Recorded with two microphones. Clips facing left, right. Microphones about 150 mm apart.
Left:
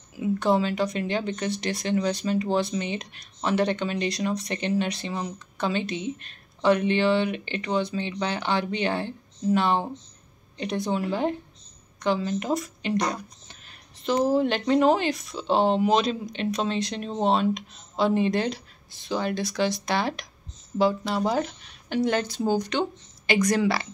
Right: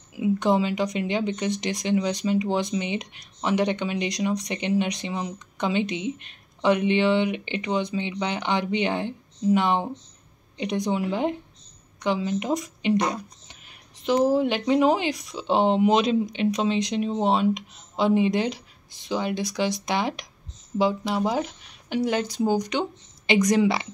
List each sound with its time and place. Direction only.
0.1 s speech: 15° right (ahead or behind)